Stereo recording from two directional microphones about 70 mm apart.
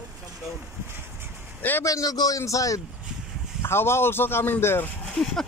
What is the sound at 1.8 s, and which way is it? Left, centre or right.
Speech, left.